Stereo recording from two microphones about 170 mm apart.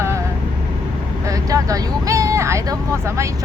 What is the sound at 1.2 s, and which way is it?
Speech, 20° right (ahead or behind).